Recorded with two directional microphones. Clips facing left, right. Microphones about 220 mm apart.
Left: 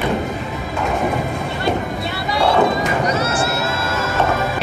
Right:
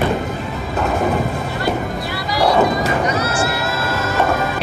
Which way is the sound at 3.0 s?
25° left (ahead or behind).